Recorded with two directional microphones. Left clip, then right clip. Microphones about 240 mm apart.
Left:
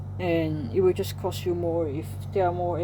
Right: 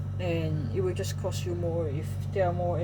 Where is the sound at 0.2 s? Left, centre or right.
Left.